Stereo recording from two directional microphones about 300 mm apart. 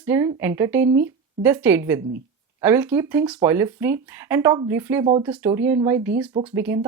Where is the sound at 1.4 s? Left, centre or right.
Centre.